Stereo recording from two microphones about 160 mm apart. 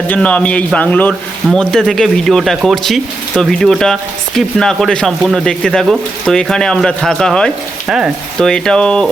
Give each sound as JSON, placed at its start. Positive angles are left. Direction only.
{"t": 0.1, "sound": "a man's voice", "side_deg": 10}